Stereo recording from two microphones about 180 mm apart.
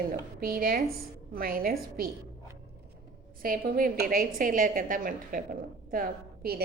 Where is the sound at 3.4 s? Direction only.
55° right (ahead or behind).